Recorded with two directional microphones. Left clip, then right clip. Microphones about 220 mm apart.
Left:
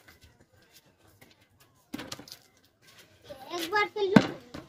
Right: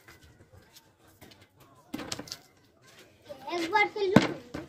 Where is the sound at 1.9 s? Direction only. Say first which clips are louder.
Right 3 dB; 5° right (ahead or behind).